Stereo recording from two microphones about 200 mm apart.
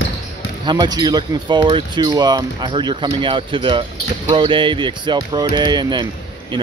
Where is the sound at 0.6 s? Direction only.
20° right (ahead or behind).